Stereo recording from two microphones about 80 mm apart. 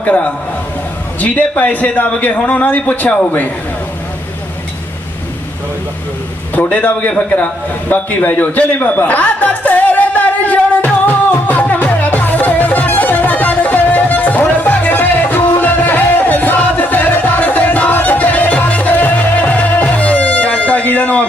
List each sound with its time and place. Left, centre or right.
0.0 s a man's voice: centre
6.5 s a man's voice: centre
7.3 s a sound: centre